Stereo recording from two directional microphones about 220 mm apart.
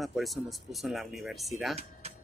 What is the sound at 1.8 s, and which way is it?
Music, 30° right (ahead or behind).